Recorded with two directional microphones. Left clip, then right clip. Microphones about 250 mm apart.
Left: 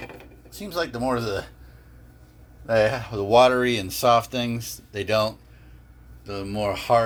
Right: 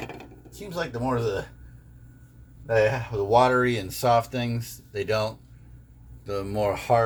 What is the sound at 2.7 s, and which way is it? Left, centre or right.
Speech, left.